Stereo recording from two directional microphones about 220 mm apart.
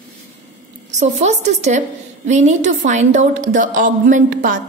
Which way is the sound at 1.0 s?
30° right (ahead or behind).